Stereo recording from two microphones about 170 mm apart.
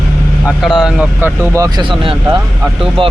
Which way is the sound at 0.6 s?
5° right (ahead or behind).